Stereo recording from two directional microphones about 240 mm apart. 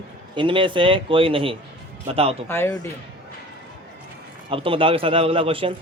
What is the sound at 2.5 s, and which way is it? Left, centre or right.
Speech, centre.